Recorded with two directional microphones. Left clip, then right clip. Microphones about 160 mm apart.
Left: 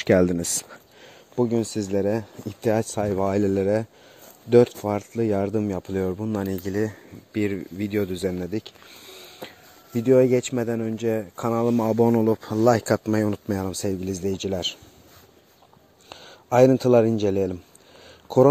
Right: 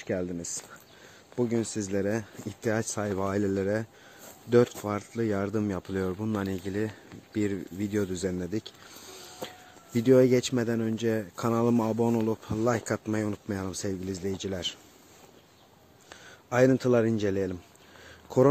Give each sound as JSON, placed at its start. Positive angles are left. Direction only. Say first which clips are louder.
{"t": 0.0, "sound": "speech", "louder": "left 13 dB", "side_deg": 85}
{"t": 1.3, "sound": "speech", "louder": "left 6 dB", "side_deg": 35}
{"t": 7.3, "sound": "speech", "louder": "left 4 dB", "side_deg": 15}
{"t": 12.3, "sound": "speech", "louder": "left 9 dB", "side_deg": 40}
{"t": 16.1, "sound": "speech", "louder": "left 8 dB", "side_deg": 30}